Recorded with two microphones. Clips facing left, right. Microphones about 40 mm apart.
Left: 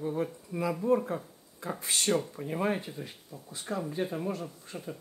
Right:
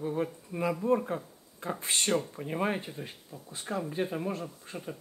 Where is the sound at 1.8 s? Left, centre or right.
Right.